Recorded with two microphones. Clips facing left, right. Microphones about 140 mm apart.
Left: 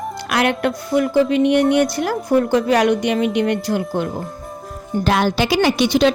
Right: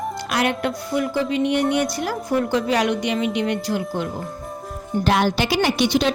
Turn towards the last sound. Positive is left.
turn(degrees=90)